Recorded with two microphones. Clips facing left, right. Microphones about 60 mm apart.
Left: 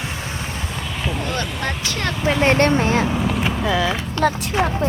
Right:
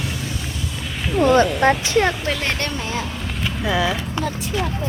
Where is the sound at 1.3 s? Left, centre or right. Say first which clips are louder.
Right 10 dB; right.